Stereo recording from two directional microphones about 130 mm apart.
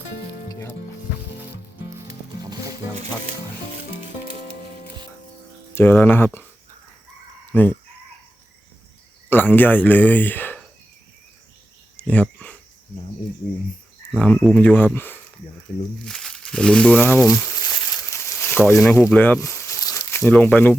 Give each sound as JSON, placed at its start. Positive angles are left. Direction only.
{"t": 0.4, "sound": "music", "side_deg": 30}
{"t": 2.4, "sound": "music", "side_deg": -30}
{"t": 5.7, "sound": "speech", "side_deg": 15}
{"t": 7.5, "sound": "speech", "side_deg": 15}
{"t": 9.3, "sound": "speech", "side_deg": 15}
{"t": 11.9, "sound": "speech", "side_deg": 10}
{"t": 14.2, "sound": "speech", "side_deg": 10}
{"t": 16.0, "sound": "speech", "side_deg": 5}
{"t": 17.6, "sound": "a sound", "side_deg": 30}
{"t": 18.3, "sound": "speech", "side_deg": 15}
{"t": 19.4, "sound": "crumpling", "side_deg": 20}
{"t": 20.2, "sound": "speech", "side_deg": 10}